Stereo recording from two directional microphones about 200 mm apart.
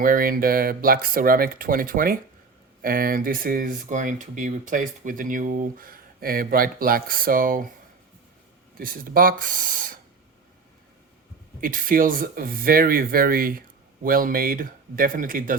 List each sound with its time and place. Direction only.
0.0 s speech: 45° right (ahead or behind)
8.8 s speech: 45° right (ahead or behind)
11.6 s speech: 45° right (ahead or behind)